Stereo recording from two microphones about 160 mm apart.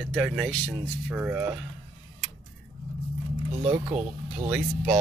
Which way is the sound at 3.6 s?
35° right (ahead or behind).